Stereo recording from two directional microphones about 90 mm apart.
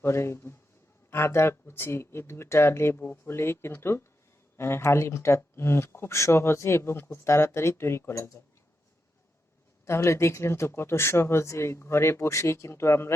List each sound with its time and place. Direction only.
0.0 s speech: 30° left (ahead or behind)
9.8 s speech: 30° left (ahead or behind)